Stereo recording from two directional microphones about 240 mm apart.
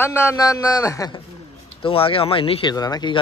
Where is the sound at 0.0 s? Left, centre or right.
Centre.